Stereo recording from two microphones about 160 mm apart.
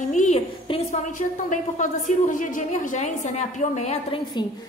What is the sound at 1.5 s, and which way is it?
A woman's voice, 50° left (ahead or behind).